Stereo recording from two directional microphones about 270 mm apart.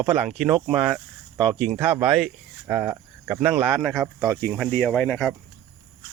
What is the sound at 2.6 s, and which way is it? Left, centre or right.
Cricket, centre.